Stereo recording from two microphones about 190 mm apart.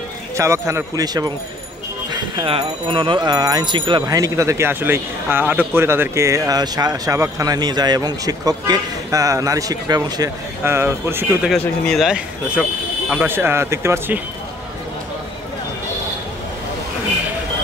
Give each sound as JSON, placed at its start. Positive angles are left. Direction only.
{"t": 0.4, "sound": "a man's voice", "side_deg": -15}
{"t": 11.5, "sound": "a man's voice", "side_deg": 5}